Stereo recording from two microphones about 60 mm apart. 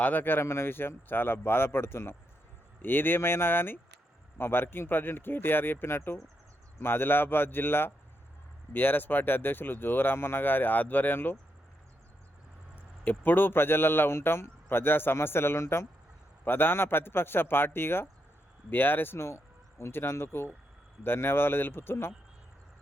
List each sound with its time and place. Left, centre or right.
0.0 s speech: left
13.1 s speech: left
16.4 s speech: left